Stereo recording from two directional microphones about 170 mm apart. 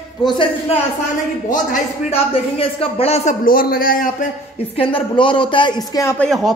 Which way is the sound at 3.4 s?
60° left (ahead or behind).